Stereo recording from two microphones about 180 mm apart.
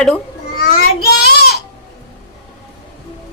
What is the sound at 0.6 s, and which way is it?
Child singing, 60° left (ahead or behind).